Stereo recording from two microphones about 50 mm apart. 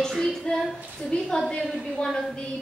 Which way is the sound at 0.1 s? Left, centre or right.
Centre.